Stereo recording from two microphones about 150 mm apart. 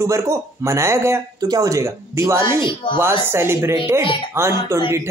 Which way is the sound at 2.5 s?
30° left (ahead or behind).